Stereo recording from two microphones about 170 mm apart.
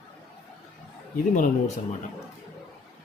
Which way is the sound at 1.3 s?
45° left (ahead or behind).